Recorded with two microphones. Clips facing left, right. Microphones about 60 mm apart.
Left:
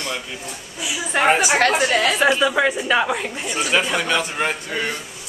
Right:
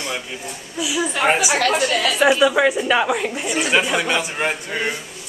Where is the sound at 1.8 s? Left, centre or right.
Left.